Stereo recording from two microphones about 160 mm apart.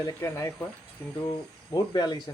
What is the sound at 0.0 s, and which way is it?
Speech, 20° left (ahead or behind).